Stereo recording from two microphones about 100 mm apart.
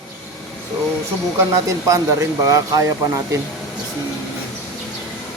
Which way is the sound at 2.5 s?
35° right (ahead or behind).